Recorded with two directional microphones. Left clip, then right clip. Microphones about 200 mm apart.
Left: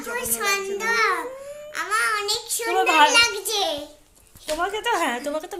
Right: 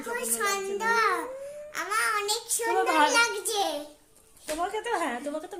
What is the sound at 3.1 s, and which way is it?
Speech, 25° right (ahead or behind).